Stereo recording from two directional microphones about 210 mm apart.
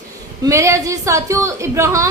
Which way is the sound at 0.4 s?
15° right (ahead or behind).